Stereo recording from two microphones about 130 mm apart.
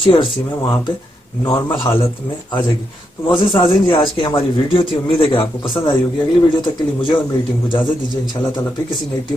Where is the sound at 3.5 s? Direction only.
35° left (ahead or behind).